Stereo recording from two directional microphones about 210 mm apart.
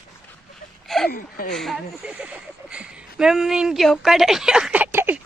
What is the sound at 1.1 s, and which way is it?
Speech, 45° left (ahead or behind).